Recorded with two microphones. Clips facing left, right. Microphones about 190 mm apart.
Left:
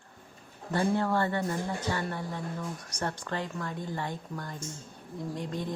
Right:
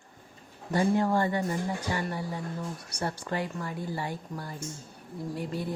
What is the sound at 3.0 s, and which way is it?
A woman's voice, 10° right (ahead or behind).